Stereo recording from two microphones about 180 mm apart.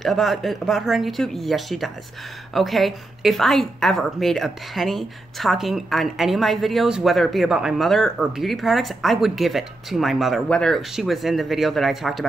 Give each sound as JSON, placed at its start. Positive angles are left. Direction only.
{"t": 0.0, "sound": "a woman's voice", "side_deg": 0}